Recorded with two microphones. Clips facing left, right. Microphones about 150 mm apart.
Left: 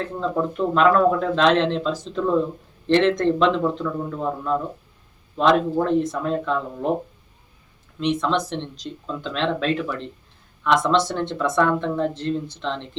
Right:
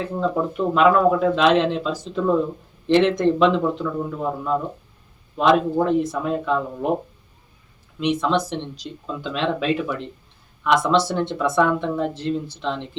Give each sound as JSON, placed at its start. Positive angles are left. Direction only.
{"t": 0.0, "sound": "speech", "side_deg": -5}
{"t": 7.9, "sound": "speech", "side_deg": -5}